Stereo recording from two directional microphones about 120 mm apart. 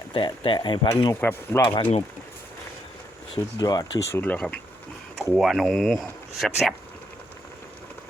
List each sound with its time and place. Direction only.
0.1 s speech: 45° left (ahead or behind)
1.2 s speech: 20° left (ahead or behind)
1.6 s speech: 40° left (ahead or behind)
3.6 s speech: 30° left (ahead or behind)
4.1 s speech: 15° left (ahead or behind)